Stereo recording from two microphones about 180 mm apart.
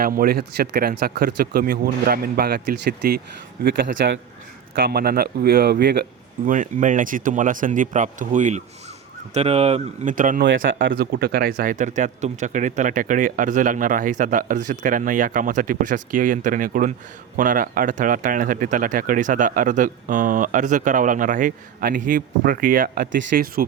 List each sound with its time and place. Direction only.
0.0 s a man's voice: 55° right (ahead or behind); by 4.1 s 70° right (ahead or behind)
4.7 s speech: 60° right (ahead or behind)